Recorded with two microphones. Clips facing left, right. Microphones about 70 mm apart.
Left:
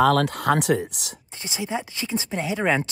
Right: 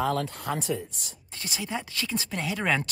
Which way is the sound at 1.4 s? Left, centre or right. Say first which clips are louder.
Left 4 dB; left.